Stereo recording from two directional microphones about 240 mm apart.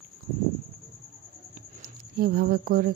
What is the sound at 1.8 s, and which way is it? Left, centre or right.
Speech, right.